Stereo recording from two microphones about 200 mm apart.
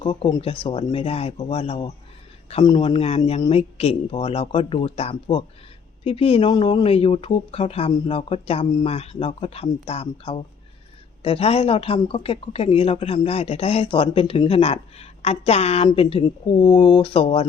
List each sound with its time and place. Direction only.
0.0 s speech: 25° left (ahead or behind)